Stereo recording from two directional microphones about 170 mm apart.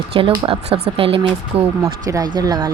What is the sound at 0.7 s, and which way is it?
Speech, 75° right (ahead or behind).